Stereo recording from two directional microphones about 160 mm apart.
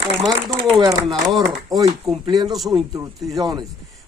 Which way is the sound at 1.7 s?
20° right (ahead or behind).